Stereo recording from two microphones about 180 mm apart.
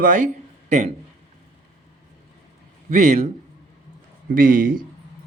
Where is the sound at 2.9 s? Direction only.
45° right (ahead or behind).